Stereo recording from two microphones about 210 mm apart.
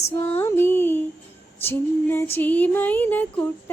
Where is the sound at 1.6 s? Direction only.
10° left (ahead or behind).